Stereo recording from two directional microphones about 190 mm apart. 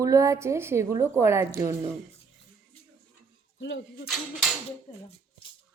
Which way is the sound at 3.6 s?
75° left (ahead or behind).